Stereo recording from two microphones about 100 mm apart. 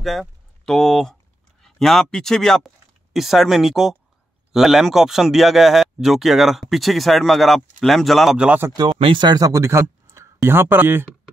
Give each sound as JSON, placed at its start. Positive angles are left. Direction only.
{"t": 0.0, "sound": "speech", "side_deg": 0}
{"t": 8.4, "sound": "speech", "side_deg": -15}
{"t": 8.7, "sound": "speech", "side_deg": -55}